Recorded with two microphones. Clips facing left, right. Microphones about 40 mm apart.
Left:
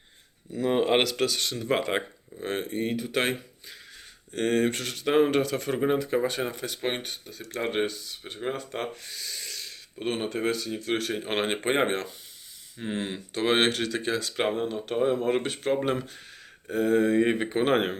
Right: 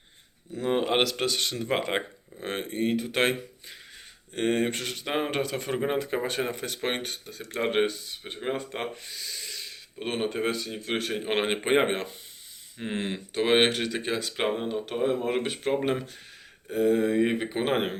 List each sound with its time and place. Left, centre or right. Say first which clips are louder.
0.6 s speech: left 2 dB; centre
2.4 s speech: even; right
4.4 s speech: left 1 dB; centre
6.5 s speech: even; right
7.5 s speech: right 2 dB; right
9.0 s a sound: even; centre
10.2 s speech: right 2 dB; centre
14.9 s speech: left 2 dB; centre